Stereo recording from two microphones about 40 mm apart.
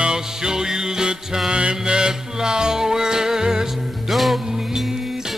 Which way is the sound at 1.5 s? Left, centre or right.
Right.